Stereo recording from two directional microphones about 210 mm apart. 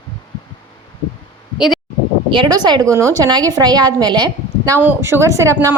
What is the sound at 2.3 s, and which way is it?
A woman's voice, 20° right (ahead or behind).